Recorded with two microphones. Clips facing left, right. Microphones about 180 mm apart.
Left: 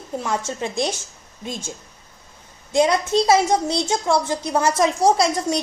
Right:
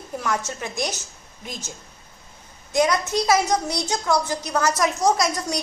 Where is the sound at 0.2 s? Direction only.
25° left (ahead or behind).